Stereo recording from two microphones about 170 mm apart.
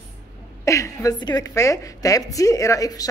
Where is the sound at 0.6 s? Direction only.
15° left (ahead or behind).